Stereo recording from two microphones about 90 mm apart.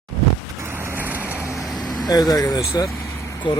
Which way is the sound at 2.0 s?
45° left (ahead or behind).